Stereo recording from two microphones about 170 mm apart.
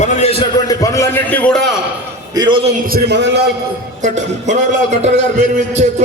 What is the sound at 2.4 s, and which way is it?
Speech, 30° right (ahead or behind).